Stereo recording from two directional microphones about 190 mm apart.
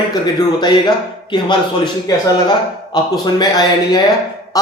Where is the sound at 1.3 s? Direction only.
25° left (ahead or behind).